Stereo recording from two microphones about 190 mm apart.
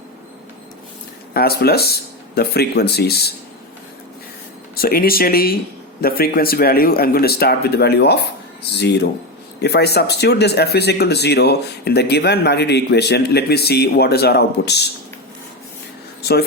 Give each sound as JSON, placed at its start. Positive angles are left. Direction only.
{"t": 1.3, "sound": "speech", "side_deg": 55}
{"t": 4.7, "sound": "speech", "side_deg": 50}